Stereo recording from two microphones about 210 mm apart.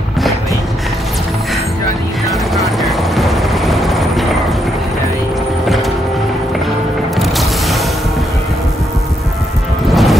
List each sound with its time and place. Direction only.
2.5 s helicopter: centre (ahead or behind)
7.2 s music: centre (ahead or behind)
9.8 s music: centre (ahead or behind)